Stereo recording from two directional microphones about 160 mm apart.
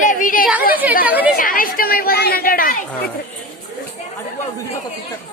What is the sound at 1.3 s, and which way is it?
Speech, 60° left (ahead or behind).